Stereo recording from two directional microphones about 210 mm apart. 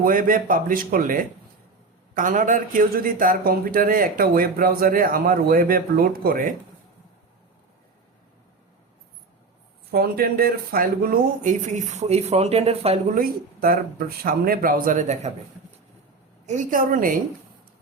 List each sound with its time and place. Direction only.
0.0 s speech: 40° right (ahead or behind)
9.9 s speech: 45° right (ahead or behind); by 13.0 s 30° right (ahead or behind)
13.1 s speech: 45° right (ahead or behind)
16.5 s speech: 40° right (ahead or behind)